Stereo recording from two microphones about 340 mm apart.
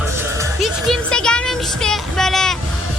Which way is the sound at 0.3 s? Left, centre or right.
Centre.